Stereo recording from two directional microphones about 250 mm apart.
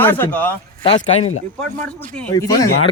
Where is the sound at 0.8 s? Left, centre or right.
Centre.